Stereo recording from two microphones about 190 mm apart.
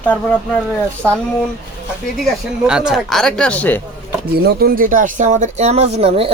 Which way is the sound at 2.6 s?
5° right (ahead or behind).